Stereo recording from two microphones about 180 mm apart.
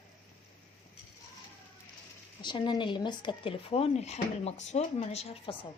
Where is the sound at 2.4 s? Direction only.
25° left (ahead or behind).